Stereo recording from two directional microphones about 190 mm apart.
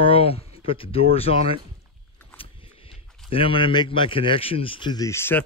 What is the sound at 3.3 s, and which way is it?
Speech, 25° left (ahead or behind).